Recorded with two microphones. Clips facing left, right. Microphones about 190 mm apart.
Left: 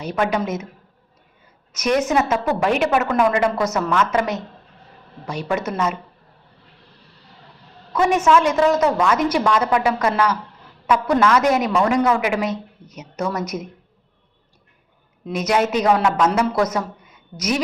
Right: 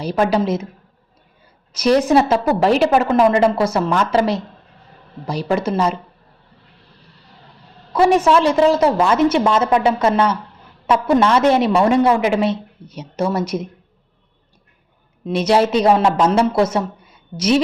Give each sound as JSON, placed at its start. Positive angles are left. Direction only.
{"t": 0.0, "sound": "a woman's voice", "side_deg": -35}
{"t": 1.7, "sound": "a woman's voice", "side_deg": -35}
{"t": 7.9, "sound": "a woman's voice", "side_deg": -35}
{"t": 15.3, "sound": "a woman's voice", "side_deg": -30}